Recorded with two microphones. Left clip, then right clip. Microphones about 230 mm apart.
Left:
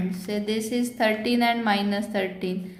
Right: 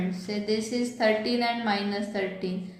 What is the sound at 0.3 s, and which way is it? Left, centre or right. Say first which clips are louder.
A woman's voice: left 2 dB; left.